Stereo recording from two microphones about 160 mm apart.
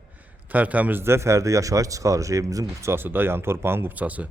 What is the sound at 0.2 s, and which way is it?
A man's voice, 10° right (ahead or behind).